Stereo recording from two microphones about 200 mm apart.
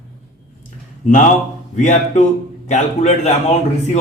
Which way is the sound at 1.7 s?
35° left (ahead or behind).